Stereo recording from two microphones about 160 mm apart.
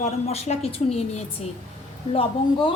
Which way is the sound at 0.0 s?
40° left (ahead or behind).